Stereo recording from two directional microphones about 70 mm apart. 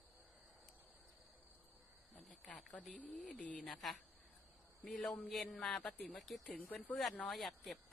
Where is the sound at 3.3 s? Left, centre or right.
Centre.